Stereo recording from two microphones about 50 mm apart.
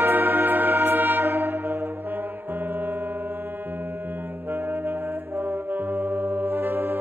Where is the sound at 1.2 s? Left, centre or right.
Right.